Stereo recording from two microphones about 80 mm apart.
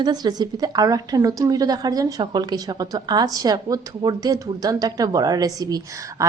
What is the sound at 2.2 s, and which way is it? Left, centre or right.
A woman's voice, right.